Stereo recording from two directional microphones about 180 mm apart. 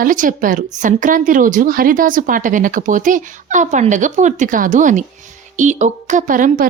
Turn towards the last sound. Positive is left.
turn(degrees=-50)  # may be behind; listen again after turning